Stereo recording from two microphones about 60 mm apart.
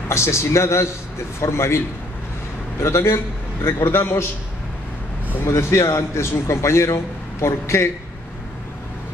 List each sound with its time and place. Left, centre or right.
0.1 s a man's voice: left
2.8 s a man's voice: left
5.5 s a man's voice: left